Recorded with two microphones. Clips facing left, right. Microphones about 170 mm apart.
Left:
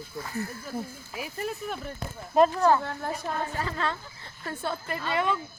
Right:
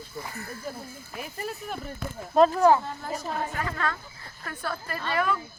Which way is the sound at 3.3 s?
55° left (ahead or behind).